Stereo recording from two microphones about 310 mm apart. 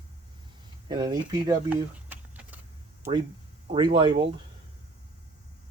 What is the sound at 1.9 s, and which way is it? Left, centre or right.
Vehicle, centre.